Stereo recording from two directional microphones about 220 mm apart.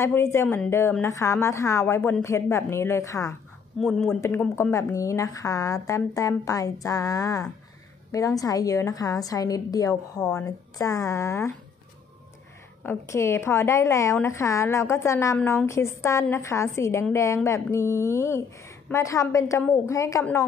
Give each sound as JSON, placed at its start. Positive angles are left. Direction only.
{"t": 0.0, "sound": "a woman's voice", "side_deg": 10}
{"t": 3.8, "sound": "speech", "side_deg": 0}
{"t": 4.2, "sound": "a woman's voice", "side_deg": 10}
{"t": 12.8, "sound": "a woman's voice", "side_deg": 10}